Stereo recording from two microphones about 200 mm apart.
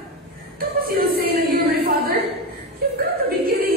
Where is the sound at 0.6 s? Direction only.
50° right (ahead or behind).